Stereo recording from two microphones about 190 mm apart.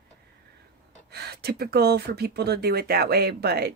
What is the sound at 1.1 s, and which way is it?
Speech, 60° right (ahead or behind).